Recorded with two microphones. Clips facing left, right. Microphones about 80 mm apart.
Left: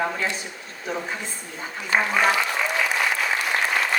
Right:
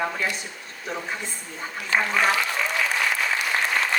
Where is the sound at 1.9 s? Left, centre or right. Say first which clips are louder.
Left 1 dB; centre.